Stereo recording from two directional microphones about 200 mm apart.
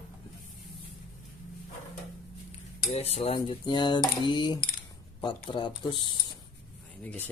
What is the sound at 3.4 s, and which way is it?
Speech, 25° left (ahead or behind).